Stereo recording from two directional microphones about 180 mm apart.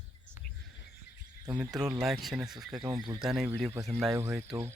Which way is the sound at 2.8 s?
20° right (ahead or behind).